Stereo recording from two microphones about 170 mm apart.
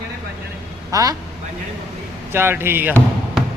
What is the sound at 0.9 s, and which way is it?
Speech, 20° right (ahead or behind).